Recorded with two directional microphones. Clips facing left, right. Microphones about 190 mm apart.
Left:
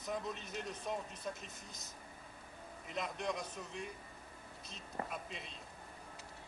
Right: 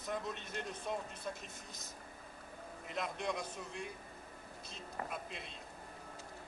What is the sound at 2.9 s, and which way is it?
Speech, centre (ahead or behind).